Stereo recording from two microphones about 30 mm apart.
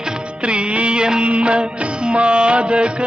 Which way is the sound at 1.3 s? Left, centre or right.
Right.